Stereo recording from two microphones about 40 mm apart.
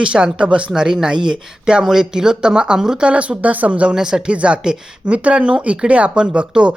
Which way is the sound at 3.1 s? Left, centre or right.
Right.